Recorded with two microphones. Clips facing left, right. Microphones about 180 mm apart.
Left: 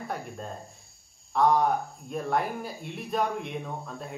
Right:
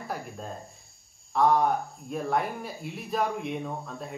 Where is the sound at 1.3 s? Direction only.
Centre (ahead or behind).